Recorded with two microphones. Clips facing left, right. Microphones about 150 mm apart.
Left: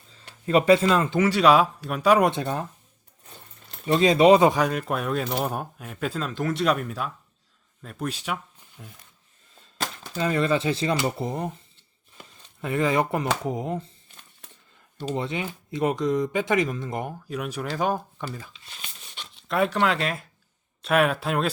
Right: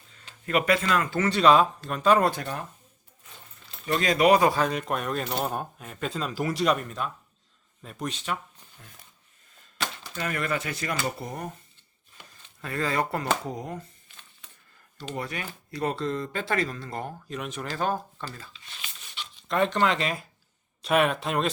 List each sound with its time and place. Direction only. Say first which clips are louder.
0.4 s speech: left 6 dB; 30° left (ahead or behind)
1.2 s speech: left 1 dB; 10° left (ahead or behind)
2.3 s speech: left 5 dB; 25° left (ahead or behind)
3.8 s speech: left 5 dB; 25° left (ahead or behind)
4.7 s speech: left 2 dB; 5° left (ahead or behind)
10.2 s speech: left 7 dB; 25° left (ahead or behind)
12.6 s speech: left 5 dB; 20° left (ahead or behind)
15.1 s speech: left 5 dB; 20° left (ahead or behind)
18.6 s a sound: left 1 dB; 40° left (ahead or behind)
19.5 s speech: left 1 dB; 5° left (ahead or behind)